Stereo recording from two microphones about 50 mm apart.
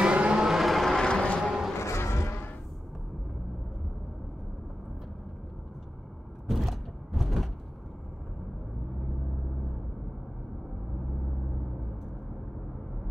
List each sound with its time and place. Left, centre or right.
0.0 s vehicle: right
0.4 s vehicle: centre
0.9 s vehicle: centre
1.4 s a sound: centre
1.8 s music: left
6.5 s mechanisms: centre